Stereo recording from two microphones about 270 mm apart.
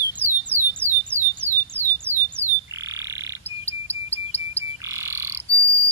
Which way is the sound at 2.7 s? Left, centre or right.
Centre.